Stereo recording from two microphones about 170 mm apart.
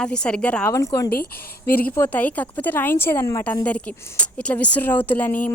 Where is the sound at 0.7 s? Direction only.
20° left (ahead or behind).